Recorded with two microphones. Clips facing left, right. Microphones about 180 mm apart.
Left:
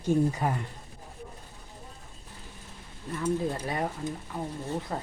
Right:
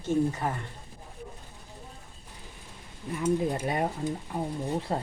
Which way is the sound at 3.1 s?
10° right (ahead or behind).